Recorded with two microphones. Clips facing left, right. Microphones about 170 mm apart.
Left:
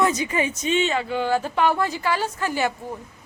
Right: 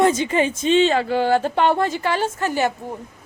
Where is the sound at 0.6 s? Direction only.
30° right (ahead or behind).